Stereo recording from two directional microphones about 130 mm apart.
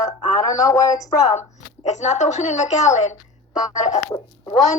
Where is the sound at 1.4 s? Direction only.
60° left (ahead or behind).